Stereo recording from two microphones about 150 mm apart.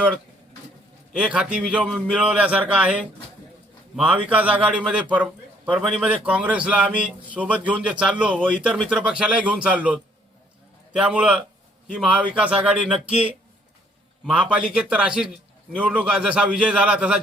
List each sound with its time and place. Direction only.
1.1 s a man's voice: 5° right (ahead or behind)